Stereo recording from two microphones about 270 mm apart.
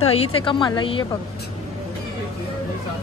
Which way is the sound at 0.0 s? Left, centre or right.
Left.